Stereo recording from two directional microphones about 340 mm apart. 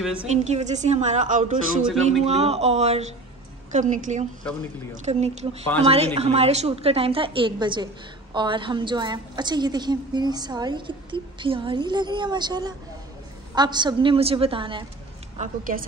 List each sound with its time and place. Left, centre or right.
0.0 s a woman's voice: centre
0.3 s a woman's voice: centre